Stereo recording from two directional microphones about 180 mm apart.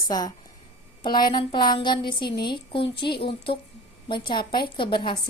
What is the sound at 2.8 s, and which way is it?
Speech, 65° left (ahead or behind).